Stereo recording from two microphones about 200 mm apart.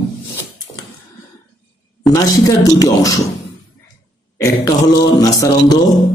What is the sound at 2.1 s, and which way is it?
Speech, 20° left (ahead or behind).